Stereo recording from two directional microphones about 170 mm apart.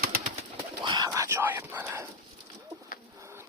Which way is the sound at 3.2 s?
15° right (ahead or behind).